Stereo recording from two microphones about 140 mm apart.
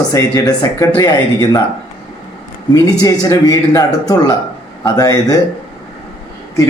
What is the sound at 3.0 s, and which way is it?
Speech, 25° left (ahead or behind).